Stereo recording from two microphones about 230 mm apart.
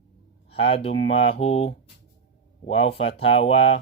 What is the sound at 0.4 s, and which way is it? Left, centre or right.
Speech, left.